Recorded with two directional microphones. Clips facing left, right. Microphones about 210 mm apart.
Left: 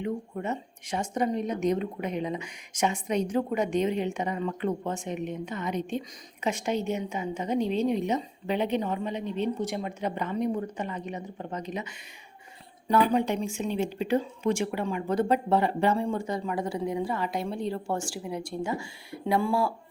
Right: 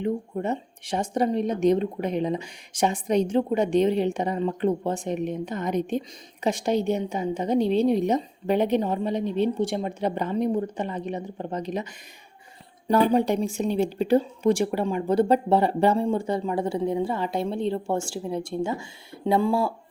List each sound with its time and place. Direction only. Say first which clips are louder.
0.0 s a woman's voice: right 5 dB; 35° right (ahead or behind)